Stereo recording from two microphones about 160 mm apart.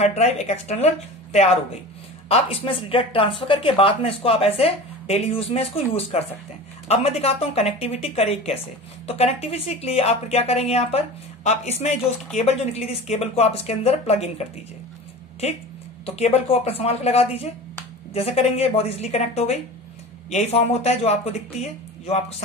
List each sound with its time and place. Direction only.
0.0 s speech: 45° left (ahead or behind)
16.2 s speech: 40° left (ahead or behind)